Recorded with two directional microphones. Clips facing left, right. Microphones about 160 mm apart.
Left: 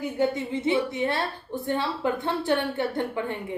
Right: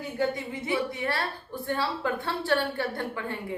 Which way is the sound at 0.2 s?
20° left (ahead or behind).